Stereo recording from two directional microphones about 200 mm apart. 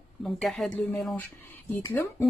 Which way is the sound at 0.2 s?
Centre (ahead or behind).